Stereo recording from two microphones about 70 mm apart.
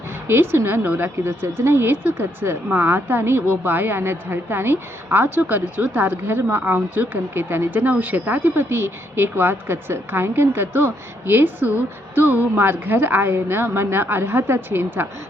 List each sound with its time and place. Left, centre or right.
0.3 s a woman's voice: right